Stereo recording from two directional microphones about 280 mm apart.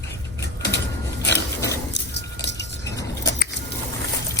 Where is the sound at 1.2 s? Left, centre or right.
Left.